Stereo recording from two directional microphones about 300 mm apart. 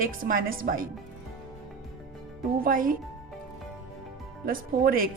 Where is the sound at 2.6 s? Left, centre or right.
Right.